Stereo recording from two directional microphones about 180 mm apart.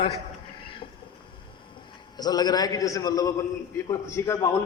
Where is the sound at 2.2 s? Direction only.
20° left (ahead or behind).